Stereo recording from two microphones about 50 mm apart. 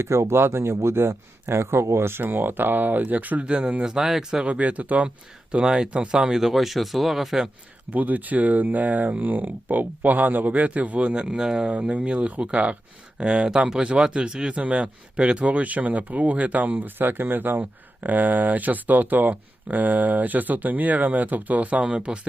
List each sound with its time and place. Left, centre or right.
0.0 s speech: right
2.2 s speech: right
3.8 s speech: centre
4.5 s speech: right
6.4 s speech: centre
7.9 s speech: right; by 11.7 s centre
11.7 s speech: right